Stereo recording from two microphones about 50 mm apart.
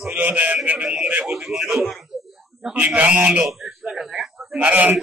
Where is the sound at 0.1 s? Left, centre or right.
Right.